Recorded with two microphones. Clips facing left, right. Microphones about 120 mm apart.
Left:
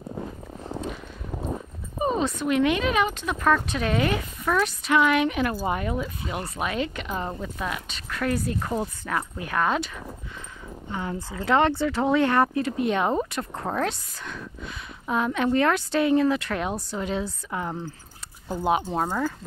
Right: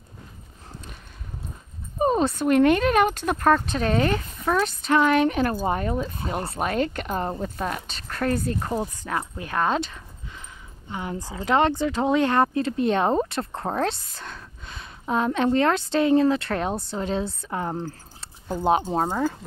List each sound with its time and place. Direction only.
2.0 s speech: 45° right (ahead or behind)
3.5 s speech: 35° right (ahead or behind)
8.7 s speech: 15° right (ahead or behind)
9.4 s speech: 30° right (ahead or behind)
10.9 s speech: 20° right (ahead or behind)